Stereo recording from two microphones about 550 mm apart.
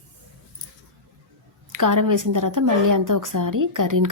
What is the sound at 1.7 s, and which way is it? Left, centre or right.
A woman's voice, right.